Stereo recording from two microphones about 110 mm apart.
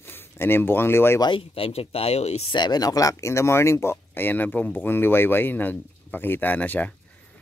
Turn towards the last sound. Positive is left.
turn(degrees=15)  # may be behind; listen again after turning